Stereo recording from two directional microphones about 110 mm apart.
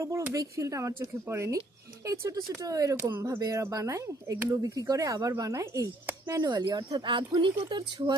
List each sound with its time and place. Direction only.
0.0 s speech: 30° right (ahead or behind); by 8.1 s 45° right (ahead or behind)